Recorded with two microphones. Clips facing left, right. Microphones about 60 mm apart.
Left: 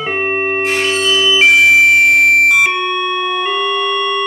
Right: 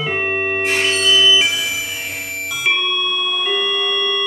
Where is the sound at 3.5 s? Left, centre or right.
Left.